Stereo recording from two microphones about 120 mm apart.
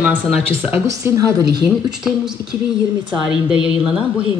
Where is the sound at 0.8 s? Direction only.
25° right (ahead or behind).